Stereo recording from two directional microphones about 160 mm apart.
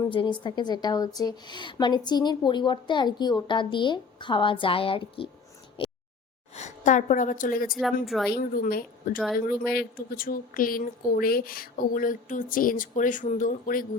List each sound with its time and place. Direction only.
0.1 s a woman's voice: 30° left (ahead or behind)
5.8 s a sound: 35° left (ahead or behind)
6.5 s a woman's voice: 45° left (ahead or behind)
7.8 s a woman's voice: centre (ahead or behind)
8.3 s speech: 65° left (ahead or behind)